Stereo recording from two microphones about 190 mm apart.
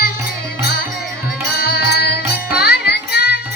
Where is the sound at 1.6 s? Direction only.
55° left (ahead or behind).